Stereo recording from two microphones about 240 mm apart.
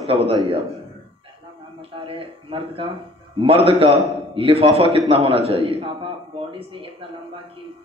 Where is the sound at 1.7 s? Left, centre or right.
Right.